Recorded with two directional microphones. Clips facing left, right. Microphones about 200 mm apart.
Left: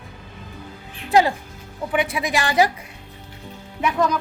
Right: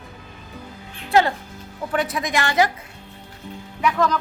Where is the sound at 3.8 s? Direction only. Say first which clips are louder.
Even; 25° left (ahead or behind).